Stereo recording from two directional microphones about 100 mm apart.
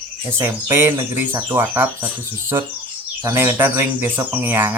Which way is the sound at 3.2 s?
25° right (ahead or behind).